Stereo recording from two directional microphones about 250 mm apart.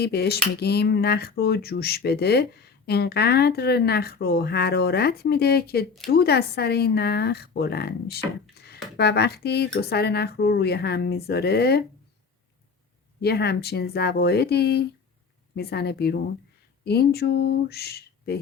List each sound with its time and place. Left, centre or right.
0.0 s speech: left
13.2 s speech: left